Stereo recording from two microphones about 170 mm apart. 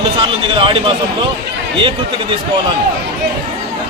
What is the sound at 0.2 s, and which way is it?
Speech, 30° right (ahead or behind).